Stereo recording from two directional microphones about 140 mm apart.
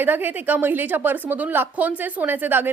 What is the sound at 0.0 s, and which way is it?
A woman's voice, 15° right (ahead or behind).